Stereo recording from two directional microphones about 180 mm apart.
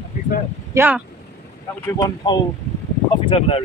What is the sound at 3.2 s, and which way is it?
Speech, 30° left (ahead or behind).